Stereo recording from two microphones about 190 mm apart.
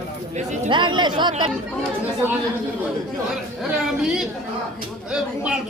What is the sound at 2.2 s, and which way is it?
Speech, 10° right (ahead or behind).